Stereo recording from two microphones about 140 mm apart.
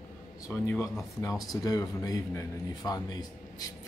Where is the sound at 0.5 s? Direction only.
15° left (ahead or behind).